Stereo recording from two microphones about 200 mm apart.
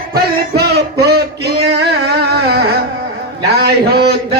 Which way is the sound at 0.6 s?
55° right (ahead or behind).